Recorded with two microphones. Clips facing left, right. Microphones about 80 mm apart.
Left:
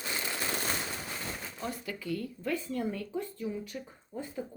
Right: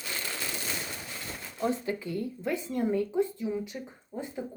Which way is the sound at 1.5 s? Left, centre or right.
Right.